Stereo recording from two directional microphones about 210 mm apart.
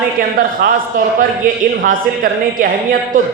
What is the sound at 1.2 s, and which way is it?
A woman's voice, 40° right (ahead or behind).